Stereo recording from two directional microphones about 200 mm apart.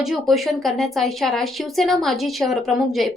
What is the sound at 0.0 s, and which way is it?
Speech, centre (ahead or behind).